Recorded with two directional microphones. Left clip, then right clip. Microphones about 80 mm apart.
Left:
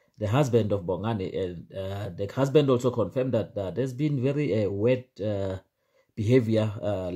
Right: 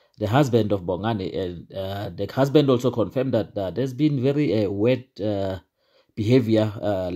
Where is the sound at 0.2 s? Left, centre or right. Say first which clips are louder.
Right 4 dB; right.